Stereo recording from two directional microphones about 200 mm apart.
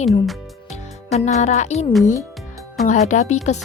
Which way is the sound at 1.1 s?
35° left (ahead or behind).